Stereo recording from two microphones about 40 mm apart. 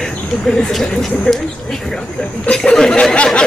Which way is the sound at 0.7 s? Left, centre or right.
Centre.